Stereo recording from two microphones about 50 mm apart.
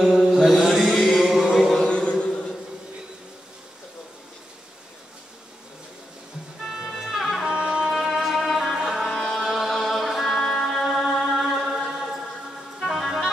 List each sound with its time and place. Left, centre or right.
0.0 s mantra: centre
0.4 s music: centre
0.9 s chant: centre
1.9 s a sound: left
6.6 s music: centre
7.4 s music: centre
7.9 s music: centre
9.0 s music: centre
9.4 s chant: centre
10.4 s music: centre